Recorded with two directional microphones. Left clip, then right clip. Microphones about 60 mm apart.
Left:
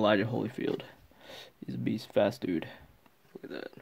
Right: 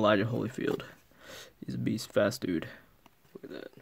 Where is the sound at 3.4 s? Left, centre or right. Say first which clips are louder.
Left 3 dB; left.